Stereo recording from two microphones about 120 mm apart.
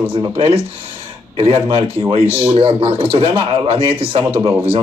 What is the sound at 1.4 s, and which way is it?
A man's voice, 45° right (ahead or behind).